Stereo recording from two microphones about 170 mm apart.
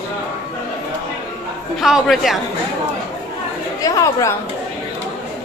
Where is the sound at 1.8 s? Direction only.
Centre (ahead or behind).